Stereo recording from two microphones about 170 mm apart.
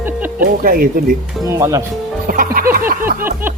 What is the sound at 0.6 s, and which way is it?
Music, 55° right (ahead or behind).